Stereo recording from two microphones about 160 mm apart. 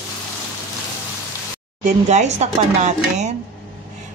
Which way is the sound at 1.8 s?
45° right (ahead or behind).